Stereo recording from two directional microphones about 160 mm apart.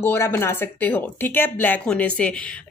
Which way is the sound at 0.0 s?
15° left (ahead or behind).